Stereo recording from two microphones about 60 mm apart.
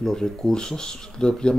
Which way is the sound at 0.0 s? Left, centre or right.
Centre.